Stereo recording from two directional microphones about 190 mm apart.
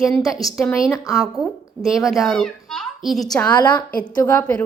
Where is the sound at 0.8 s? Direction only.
15° left (ahead or behind).